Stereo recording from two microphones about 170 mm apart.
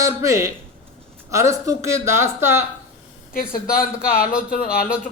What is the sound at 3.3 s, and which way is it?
Speech, 60° left (ahead or behind).